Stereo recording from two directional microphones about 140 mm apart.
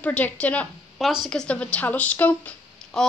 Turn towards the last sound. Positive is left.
turn(degrees=5)  # may be behind; listen again after turning